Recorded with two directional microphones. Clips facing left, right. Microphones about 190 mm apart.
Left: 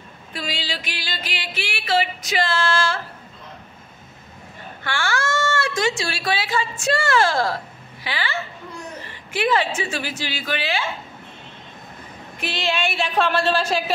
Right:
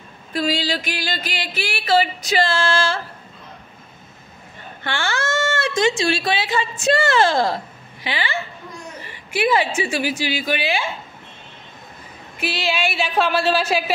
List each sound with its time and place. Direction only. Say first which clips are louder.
0.3 s a sound: right 8 dB; 40° right (ahead or behind)
4.8 s a woman's voice: right 1 dB; 20° right (ahead or behind)
12.4 s speech: right 1 dB; 5° right (ahead or behind)